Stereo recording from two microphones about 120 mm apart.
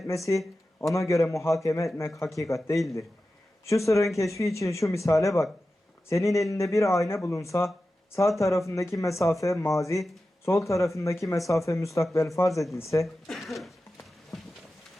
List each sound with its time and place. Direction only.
0.3 s speech: 25° left (ahead or behind)
3.7 s speech: 25° left (ahead or behind)
13.2 s speech: centre (ahead or behind)
14.3 s a sound: 5° left (ahead or behind)